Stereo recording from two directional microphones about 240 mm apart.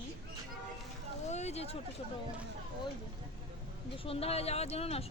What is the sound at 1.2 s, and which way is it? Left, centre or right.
Speech, left.